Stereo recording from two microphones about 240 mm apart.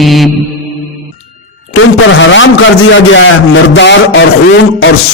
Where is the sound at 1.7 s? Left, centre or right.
Left.